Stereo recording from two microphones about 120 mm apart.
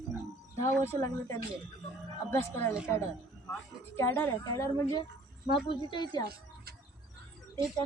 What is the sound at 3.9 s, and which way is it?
A woman's voice, 20° left (ahead or behind).